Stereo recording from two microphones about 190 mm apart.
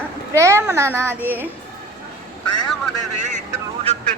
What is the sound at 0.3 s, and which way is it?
A child's voice, 15° right (ahead or behind).